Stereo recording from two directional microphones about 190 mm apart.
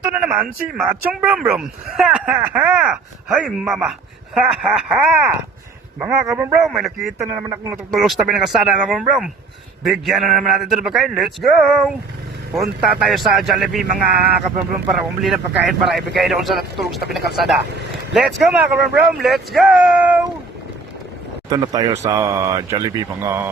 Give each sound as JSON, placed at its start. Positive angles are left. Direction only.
{"t": 0.1, "sound": "speech", "side_deg": -5}
{"t": 7.2, "sound": "speech", "side_deg": -15}
{"t": 7.9, "sound": "speech", "side_deg": 0}
{"t": 21.5, "sound": "speech", "side_deg": -20}